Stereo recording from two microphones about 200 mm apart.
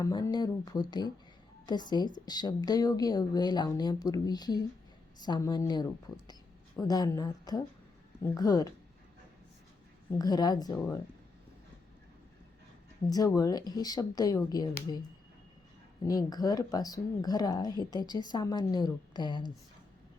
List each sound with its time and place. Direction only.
0.0 s speech: 20° left (ahead or behind)
10.1 s speech: 20° left (ahead or behind)
13.1 s speech: 15° left (ahead or behind)
16.0 s speech: 20° left (ahead or behind)